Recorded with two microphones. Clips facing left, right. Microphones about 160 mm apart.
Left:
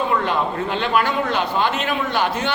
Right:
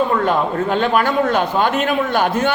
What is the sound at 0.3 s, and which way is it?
A man's voice, 45° right (ahead or behind).